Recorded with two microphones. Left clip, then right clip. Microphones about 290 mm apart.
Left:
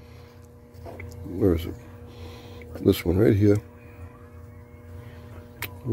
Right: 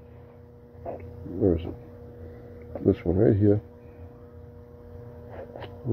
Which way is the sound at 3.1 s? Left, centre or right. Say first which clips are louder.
Even; left.